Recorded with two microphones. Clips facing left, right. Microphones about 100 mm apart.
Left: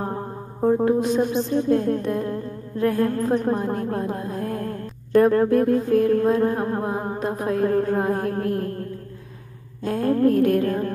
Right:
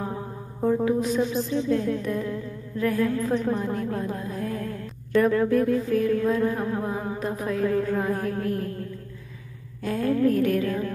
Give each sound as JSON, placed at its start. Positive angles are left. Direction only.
{"t": 0.0, "sound": "music", "side_deg": 50}
{"t": 0.6, "sound": "music", "side_deg": 30}
{"t": 1.2, "sound": "music", "side_deg": 50}
{"t": 3.0, "sound": "a sound", "side_deg": 50}
{"t": 5.3, "sound": "music", "side_deg": 50}
{"t": 9.8, "sound": "music", "side_deg": 50}